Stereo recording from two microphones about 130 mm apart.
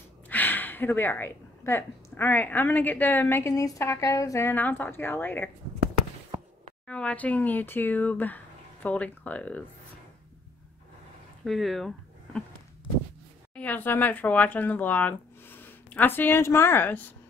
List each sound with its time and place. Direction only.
0.3 s a woman's voice: 15° left (ahead or behind)
6.9 s a woman's voice: 10° left (ahead or behind)
11.4 s speech: centre (ahead or behind)
13.6 s speech: 10° left (ahead or behind)